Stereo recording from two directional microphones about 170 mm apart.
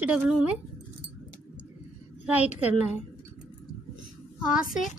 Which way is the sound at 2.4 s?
40° left (ahead or behind).